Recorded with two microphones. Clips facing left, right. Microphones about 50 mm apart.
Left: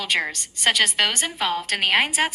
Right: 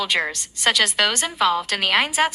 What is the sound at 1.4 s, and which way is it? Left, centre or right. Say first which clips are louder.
Speech: right 6 dB; right.